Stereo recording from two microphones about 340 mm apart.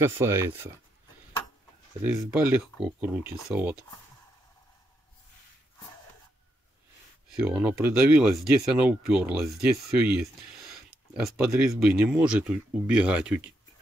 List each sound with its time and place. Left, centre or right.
0.0 s speech: centre
2.0 s speech: centre
7.3 s speech: centre